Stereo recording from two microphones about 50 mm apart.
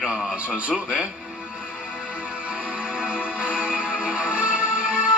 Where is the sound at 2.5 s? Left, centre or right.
Right.